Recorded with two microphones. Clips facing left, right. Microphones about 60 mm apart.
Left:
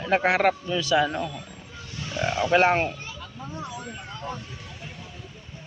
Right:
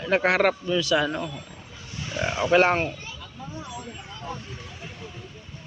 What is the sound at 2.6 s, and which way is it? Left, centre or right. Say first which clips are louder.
Speech: even; centre.